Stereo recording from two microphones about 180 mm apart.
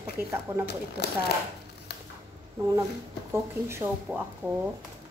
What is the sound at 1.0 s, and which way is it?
Speech, 65° left (ahead or behind).